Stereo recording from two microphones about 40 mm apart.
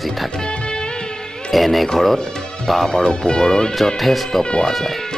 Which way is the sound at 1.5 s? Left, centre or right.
Centre.